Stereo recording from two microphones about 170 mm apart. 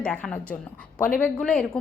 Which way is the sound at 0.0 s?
5° left (ahead or behind).